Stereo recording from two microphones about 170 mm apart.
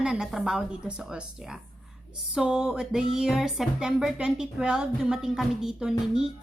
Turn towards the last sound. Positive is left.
turn(degrees=-5)  # may be behind; listen again after turning